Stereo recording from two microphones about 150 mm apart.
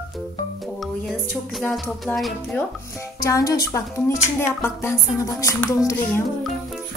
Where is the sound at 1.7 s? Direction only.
5° left (ahead or behind).